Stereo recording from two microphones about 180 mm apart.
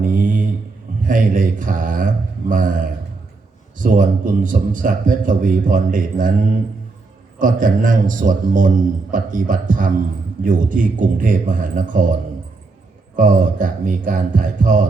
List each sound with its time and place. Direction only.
0.0 s mantra: 45° right (ahead or behind)
1.0 s a man's voice: 50° right (ahead or behind)
7.3 s a man's voice: 50° right (ahead or behind)
13.1 s a man's voice: 45° right (ahead or behind)